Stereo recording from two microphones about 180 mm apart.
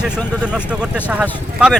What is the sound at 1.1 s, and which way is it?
Speech, 5° right (ahead or behind).